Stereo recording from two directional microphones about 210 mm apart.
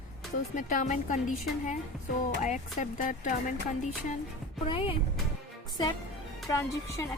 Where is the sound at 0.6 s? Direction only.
35° left (ahead or behind).